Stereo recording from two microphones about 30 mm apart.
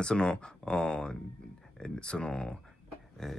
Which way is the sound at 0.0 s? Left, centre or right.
Left.